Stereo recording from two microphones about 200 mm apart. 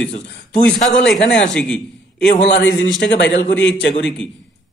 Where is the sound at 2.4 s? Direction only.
60° left (ahead or behind).